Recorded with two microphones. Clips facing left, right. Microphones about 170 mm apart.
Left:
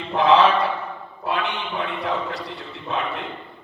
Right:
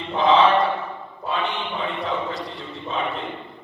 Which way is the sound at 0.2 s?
65° left (ahead or behind).